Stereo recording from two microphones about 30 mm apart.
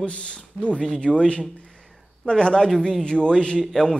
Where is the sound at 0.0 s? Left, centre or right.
Left.